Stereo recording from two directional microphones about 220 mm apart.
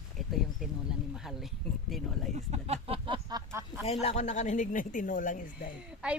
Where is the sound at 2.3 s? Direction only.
30° right (ahead or behind); by 3.8 s 15° right (ahead or behind).